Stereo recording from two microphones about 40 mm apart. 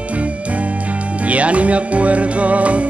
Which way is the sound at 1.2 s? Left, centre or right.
Right.